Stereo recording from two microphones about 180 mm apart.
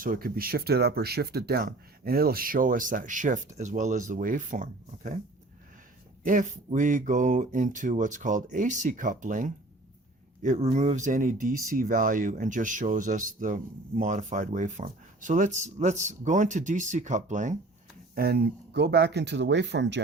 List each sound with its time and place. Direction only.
0.0 s speech: 50° right (ahead or behind)
6.2 s speech: 45° right (ahead or behind)
18.1 s speech: 60° right (ahead or behind); by 20.0 s 75° right (ahead or behind)